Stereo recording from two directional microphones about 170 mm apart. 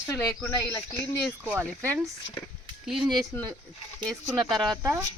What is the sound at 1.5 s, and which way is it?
Speech, 15° right (ahead or behind).